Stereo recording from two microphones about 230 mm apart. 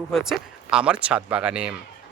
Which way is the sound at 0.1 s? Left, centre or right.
Centre.